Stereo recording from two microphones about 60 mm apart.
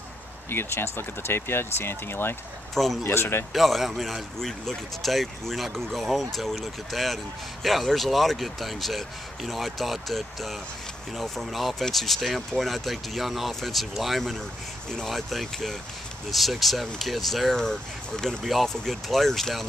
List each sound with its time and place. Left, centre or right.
0.5 s speech: left
2.7 s speech: centre
3.0 s speech: left
3.5 s speech: centre